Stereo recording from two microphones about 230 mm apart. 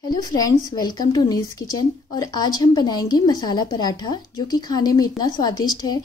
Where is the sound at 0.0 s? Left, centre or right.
Centre.